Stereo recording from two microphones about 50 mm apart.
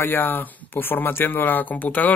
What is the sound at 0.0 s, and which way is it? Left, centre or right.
Speech, left.